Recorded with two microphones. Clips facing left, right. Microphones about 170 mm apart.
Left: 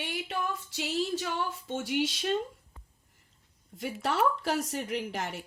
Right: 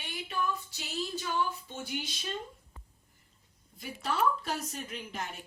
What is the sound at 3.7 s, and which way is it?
A woman's voice, 80° left.